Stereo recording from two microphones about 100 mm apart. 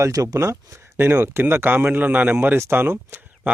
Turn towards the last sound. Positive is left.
turn(degrees=-20)  # may be behind; listen again after turning